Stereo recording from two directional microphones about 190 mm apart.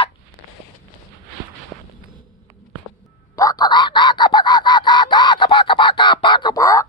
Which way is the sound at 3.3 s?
20° left (ahead or behind).